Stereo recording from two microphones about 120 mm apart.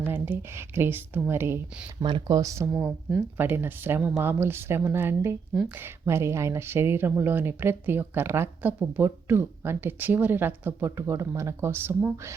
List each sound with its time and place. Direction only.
0.0 s a woman's voice: 15° right (ahead or behind)
2.0 s speech: 40° right (ahead or behind)
3.1 s a woman's voice: 15° right (ahead or behind)